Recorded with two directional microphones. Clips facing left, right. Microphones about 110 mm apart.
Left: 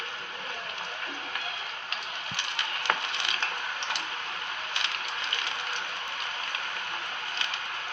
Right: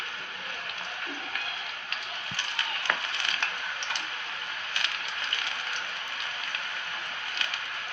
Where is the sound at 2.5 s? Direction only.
25° left (ahead or behind).